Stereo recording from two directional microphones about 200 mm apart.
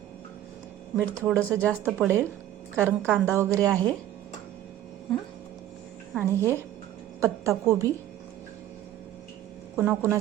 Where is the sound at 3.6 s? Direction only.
5° left (ahead or behind).